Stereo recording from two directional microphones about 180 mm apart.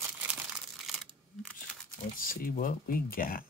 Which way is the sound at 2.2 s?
50° left (ahead or behind).